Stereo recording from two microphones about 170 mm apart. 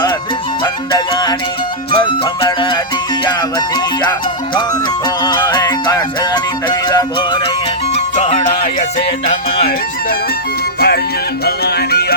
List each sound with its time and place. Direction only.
0.6 s music: 25° left (ahead or behind)
5.0 s music: 25° left (ahead or behind)
7.9 s music: 40° left (ahead or behind)
10.8 s music: 70° left (ahead or behind)